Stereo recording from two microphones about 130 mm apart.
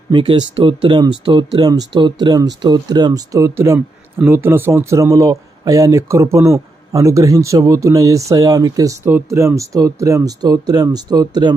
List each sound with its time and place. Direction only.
0.1 s speech: 40° right (ahead or behind)
9.0 s speech: 20° right (ahead or behind); by 11.5 s 35° right (ahead or behind)